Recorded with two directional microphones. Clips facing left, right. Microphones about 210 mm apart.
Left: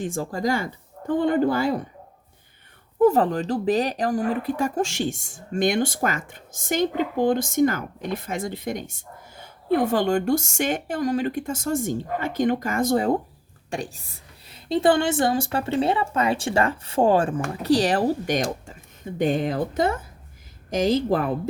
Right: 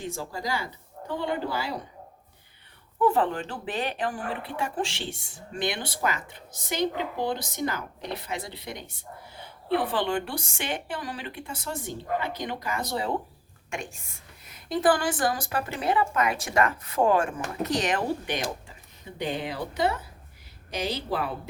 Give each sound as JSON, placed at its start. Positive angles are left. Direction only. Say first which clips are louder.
{"t": 0.0, "sound": "speech", "louder": "left 8 dB", "side_deg": 50}
{"t": 3.0, "sound": "speech", "louder": "left 6 dB", "side_deg": 40}
{"t": 13.7, "sound": "a woman's voice", "louder": "left 5 dB", "side_deg": 35}